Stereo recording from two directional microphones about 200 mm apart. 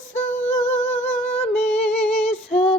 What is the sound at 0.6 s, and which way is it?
Humming, 10° left (ahead or behind).